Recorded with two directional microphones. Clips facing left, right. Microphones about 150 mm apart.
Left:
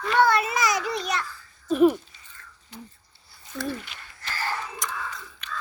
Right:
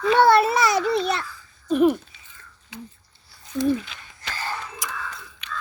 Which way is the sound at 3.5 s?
15° right (ahead or behind).